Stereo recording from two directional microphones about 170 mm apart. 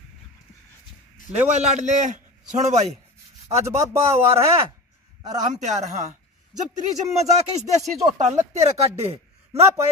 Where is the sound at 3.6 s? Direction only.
15° right (ahead or behind).